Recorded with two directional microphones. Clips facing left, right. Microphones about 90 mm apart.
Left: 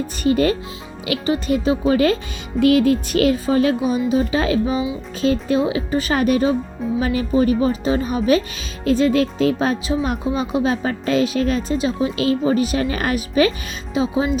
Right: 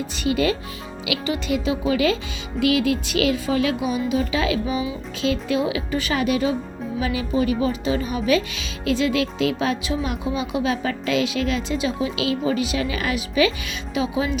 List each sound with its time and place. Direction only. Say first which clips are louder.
0.2 s speech: left 4 dB; 45° left (ahead or behind)
13.9 s speech: left 4 dB; 35° left (ahead or behind)